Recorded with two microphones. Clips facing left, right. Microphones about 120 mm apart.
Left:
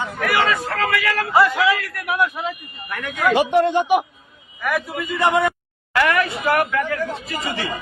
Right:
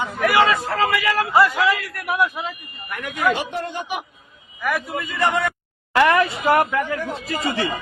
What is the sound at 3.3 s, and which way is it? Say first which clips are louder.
Speech: left 10 dB; 90° left.